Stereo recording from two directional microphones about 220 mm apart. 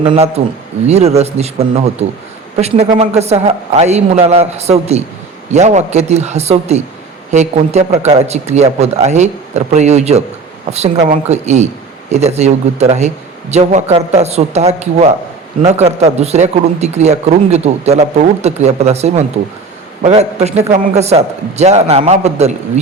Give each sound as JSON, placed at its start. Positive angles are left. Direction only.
{"t": 0.0, "sound": "a man's voice", "side_deg": -25}